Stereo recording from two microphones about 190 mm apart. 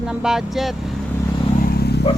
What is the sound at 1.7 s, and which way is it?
Vehicle, 60° left (ahead or behind).